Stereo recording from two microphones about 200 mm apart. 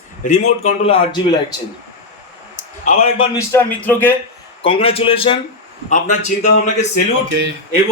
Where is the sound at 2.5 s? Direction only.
40° left (ahead or behind).